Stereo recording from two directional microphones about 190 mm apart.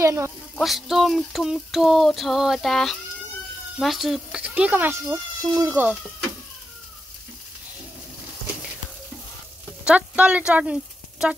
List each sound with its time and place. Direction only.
0.0 s speech: 15° right (ahead or behind)
0.6 s a sound: centre (ahead or behind)
3.7 s speech: centre (ahead or behind)
9.8 s speech: 5° right (ahead or behind)